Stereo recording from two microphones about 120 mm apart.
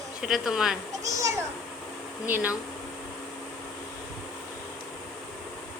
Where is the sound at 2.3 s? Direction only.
15° right (ahead or behind).